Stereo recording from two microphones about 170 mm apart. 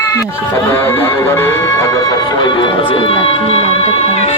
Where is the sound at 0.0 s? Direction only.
15° left (ahead or behind).